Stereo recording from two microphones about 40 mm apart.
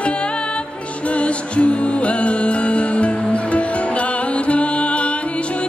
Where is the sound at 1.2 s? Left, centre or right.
Left.